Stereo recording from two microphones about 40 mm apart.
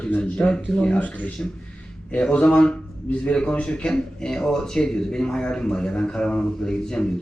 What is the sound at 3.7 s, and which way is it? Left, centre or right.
Speech, centre.